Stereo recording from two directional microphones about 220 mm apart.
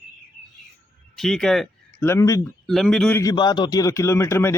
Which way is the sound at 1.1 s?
Centre (ahead or behind).